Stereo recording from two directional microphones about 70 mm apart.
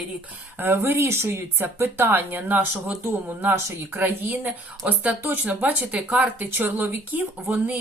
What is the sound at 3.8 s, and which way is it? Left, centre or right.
Speech, right.